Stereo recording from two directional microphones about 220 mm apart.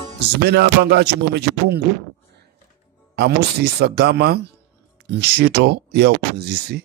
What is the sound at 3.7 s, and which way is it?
Music, 45° right (ahead or behind).